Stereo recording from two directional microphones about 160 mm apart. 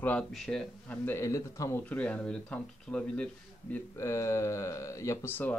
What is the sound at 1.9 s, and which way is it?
Speech, 10° left (ahead or behind).